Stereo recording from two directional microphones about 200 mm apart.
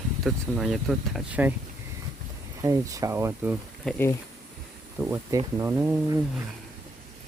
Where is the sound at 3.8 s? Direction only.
10° left (ahead or behind).